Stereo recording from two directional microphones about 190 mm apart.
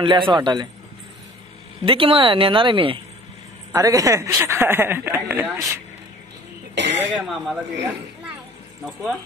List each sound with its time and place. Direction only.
0.0 s speech: 25° right (ahead or behind)
1.9 s speech: 30° right (ahead or behind); by 5.8 s 10° right (ahead or behind)
6.7 s throat clearing: 70° right (ahead or behind)
7.2 s speech: centre (ahead or behind)
8.8 s speech: centre (ahead or behind)